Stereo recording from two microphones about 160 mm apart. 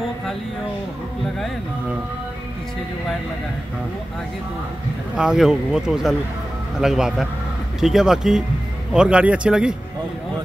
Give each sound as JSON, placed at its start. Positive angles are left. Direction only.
{"t": 5.1, "sound": "speech", "side_deg": -5}